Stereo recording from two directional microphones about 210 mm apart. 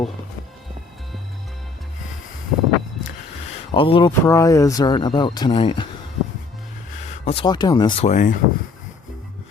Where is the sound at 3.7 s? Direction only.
25° left (ahead or behind).